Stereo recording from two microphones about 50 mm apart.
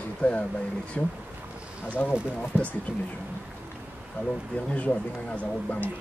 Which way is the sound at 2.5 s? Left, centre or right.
Right.